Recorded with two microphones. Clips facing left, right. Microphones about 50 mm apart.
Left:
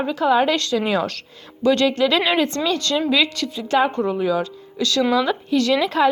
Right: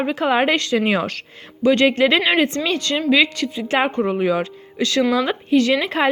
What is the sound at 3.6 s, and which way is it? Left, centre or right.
Speech, right.